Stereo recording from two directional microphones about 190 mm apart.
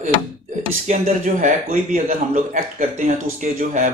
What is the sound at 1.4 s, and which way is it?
Speech, 40° right (ahead or behind).